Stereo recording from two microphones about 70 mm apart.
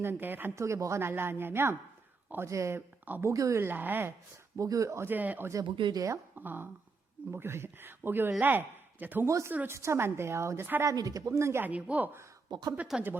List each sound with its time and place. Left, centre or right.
0.0 s a woman's voice: right
0.5 s speech: right
2.5 s speech: right
3.3 s speech: right
3.6 s speech: right
4.5 s speech: right
5.0 s a woman's voice: right
5.5 s speech: right
6.3 s a woman's voice: right
9.2 s speech: right
10.8 s speech: right
11.6 s a woman's voice: right
12.5 s speech: right
12.9 s speech: centre